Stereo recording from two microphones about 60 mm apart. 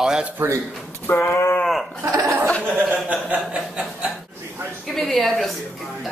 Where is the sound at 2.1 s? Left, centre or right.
Right.